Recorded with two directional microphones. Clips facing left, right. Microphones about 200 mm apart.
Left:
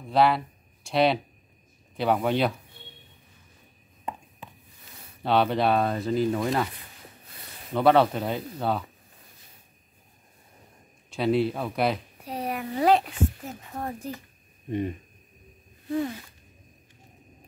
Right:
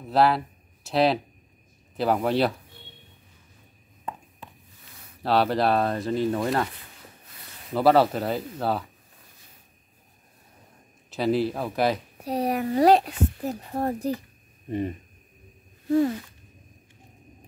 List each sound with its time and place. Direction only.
0.1 s speech: centre (ahead or behind)
5.2 s speech: centre (ahead or behind)
7.7 s speech: 5° right (ahead or behind)
11.1 s speech: centre (ahead or behind)
12.3 s a woman's voice: 40° right (ahead or behind)